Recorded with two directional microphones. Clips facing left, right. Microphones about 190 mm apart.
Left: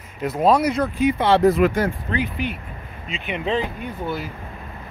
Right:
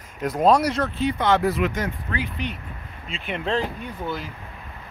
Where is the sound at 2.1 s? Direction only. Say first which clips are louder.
Left 5 dB; 25° left (ahead or behind).